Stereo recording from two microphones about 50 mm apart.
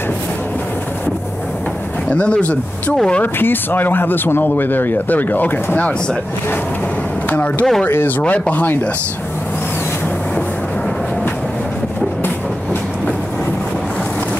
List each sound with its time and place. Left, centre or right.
2.0 s speech: left
3.3 s speech: left
7.2 s a sound: left
8.2 s speech: left